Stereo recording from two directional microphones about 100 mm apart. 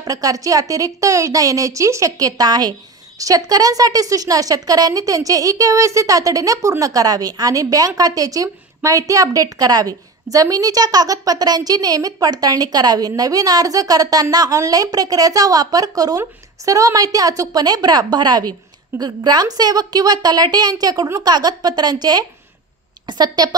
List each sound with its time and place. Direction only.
0.0 s a woman's voice: 35° right (ahead or behind)